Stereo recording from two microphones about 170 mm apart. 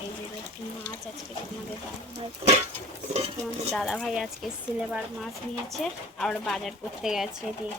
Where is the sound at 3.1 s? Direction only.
35° right (ahead or behind).